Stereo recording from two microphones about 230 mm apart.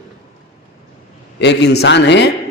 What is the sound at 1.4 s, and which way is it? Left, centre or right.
Speech, left.